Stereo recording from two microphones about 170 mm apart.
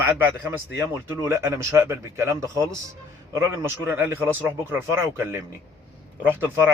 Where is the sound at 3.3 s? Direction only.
15° right (ahead or behind).